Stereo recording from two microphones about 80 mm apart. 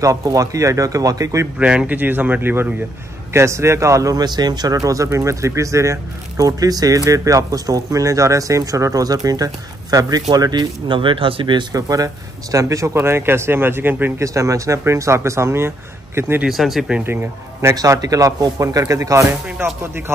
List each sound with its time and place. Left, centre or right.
0.0 s speech: right
1.6 s a man's voice: centre
3.3 s speech: right
4.2 s speech: right
10.9 s speech: right
11.7 s speech: right
12.9 s a man's voice: right
14.2 s speech: right
16.4 s speech: centre
17.0 s a man's voice: right
17.7 s speech: right